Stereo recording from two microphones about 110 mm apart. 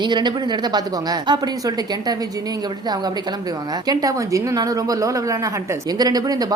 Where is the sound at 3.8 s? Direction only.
30° right (ahead or behind).